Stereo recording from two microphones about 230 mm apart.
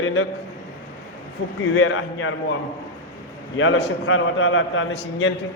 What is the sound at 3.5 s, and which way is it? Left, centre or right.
A man's voice, left.